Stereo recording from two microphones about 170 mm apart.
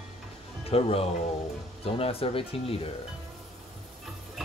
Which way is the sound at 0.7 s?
35° left (ahead or behind).